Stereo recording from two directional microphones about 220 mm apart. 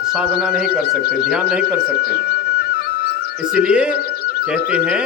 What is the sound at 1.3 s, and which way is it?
Speech, 5° right (ahead or behind).